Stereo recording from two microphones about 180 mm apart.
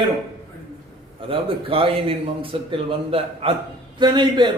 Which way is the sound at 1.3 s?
30° right (ahead or behind).